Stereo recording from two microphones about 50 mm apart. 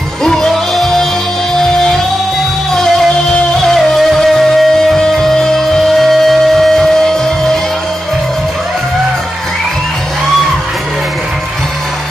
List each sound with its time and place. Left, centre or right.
0.2 s music: centre
2.7 s music: centre